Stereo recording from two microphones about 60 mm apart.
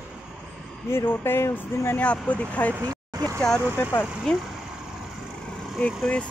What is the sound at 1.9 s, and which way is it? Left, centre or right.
Speech, left.